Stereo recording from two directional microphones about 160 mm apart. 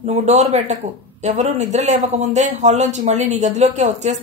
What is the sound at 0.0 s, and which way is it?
A man's voice, 45° right (ahead or behind).